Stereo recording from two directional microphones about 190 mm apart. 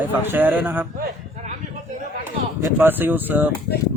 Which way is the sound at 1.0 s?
40° right (ahead or behind).